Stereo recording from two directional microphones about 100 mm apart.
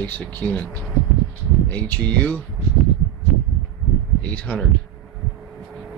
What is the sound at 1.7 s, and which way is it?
Speech, 20° left (ahead or behind).